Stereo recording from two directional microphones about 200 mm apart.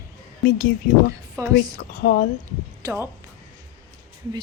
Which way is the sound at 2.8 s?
10° right (ahead or behind).